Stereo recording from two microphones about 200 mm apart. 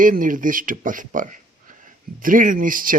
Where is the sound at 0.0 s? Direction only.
40° right (ahead or behind).